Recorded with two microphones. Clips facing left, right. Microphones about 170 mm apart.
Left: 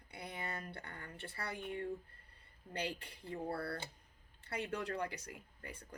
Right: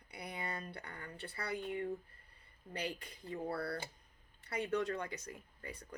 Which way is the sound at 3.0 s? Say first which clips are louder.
Right 1 dB; 25° left (ahead or behind).